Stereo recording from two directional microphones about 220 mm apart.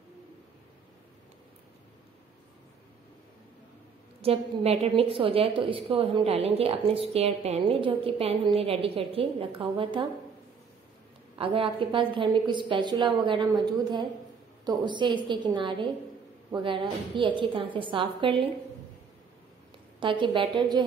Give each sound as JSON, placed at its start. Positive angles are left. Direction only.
{"t": 4.2, "sound": "a woman's voice", "side_deg": -25}
{"t": 11.3, "sound": "a woman's voice", "side_deg": -25}
{"t": 20.0, "sound": "a woman's voice", "side_deg": -20}